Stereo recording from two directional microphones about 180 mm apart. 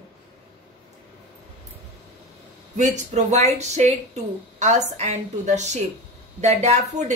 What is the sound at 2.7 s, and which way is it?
A woman's voice, 40° right (ahead or behind).